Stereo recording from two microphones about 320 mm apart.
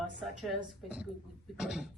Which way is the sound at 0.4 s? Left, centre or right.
Centre.